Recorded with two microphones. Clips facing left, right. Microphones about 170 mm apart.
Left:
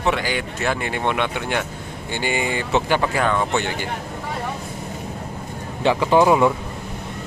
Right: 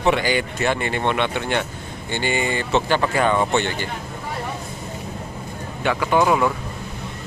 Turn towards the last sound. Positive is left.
turn(degrees=20)  # may be behind; listen again after turning